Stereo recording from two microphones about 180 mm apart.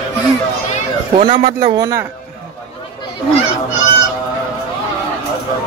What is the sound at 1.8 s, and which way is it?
Speech, 20° right (ahead or behind).